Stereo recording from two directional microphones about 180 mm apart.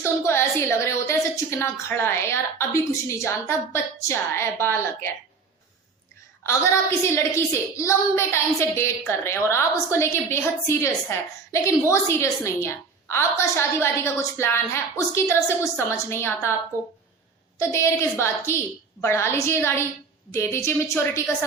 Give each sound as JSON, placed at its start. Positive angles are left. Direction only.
{"t": 0.0, "sound": "a woman's voice", "side_deg": 15}
{"t": 6.4, "sound": "a woman's voice", "side_deg": 15}
{"t": 17.6, "sound": "a woman's voice", "side_deg": 15}